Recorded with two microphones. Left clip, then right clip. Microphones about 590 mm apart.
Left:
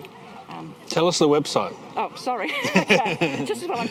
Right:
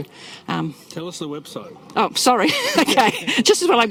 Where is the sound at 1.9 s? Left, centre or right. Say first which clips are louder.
Right 10 dB; right.